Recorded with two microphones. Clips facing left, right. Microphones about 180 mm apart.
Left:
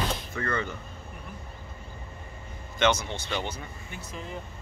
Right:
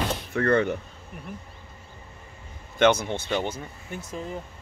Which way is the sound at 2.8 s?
55° right (ahead or behind).